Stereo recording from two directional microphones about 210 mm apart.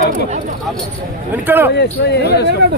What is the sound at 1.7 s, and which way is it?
Speech, 50° left (ahead or behind).